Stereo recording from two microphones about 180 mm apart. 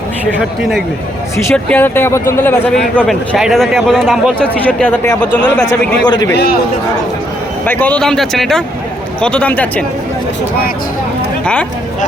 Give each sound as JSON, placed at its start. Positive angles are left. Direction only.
{"t": 1.5, "sound": "a man's voice", "side_deg": 10}
{"t": 6.1, "sound": "a man's voice", "side_deg": 25}
{"t": 7.6, "sound": "a man's voice", "side_deg": 10}